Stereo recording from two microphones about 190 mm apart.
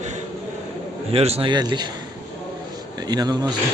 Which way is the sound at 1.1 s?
30° right (ahead or behind).